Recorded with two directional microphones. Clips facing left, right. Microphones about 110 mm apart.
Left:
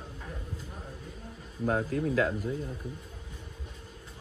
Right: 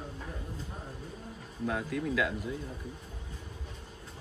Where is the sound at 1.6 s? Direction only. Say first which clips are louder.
Left 4 dB; 40° left (ahead or behind).